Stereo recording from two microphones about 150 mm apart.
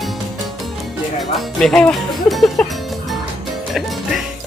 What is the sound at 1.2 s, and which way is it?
Speech, centre (ahead or behind).